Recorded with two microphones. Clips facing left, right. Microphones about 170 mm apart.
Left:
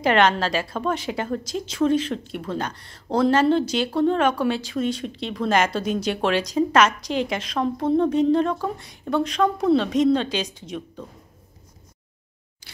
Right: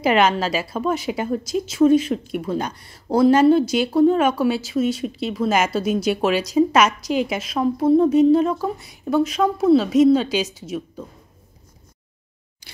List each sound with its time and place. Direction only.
0.0 s a woman's voice: 10° right (ahead or behind)